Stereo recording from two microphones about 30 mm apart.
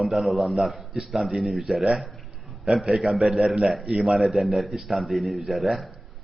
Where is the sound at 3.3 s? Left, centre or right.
Right.